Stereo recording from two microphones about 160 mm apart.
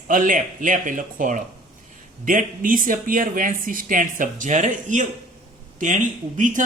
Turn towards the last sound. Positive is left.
turn(degrees=-50)  # may be behind; listen again after turning